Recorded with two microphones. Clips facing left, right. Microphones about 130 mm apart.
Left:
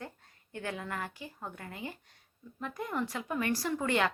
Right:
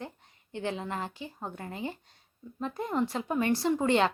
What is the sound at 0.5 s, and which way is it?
Speech, 25° right (ahead or behind).